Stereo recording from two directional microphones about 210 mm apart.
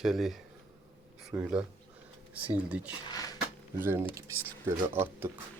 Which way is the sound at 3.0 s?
20° left (ahead or behind).